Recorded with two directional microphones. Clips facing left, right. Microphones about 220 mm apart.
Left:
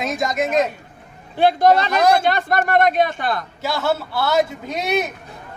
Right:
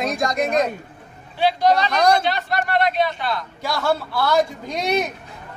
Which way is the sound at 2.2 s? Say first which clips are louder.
Left 4 dB; 50° left (ahead or behind).